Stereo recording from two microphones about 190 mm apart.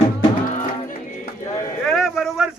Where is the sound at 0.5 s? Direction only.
45° left (ahead or behind).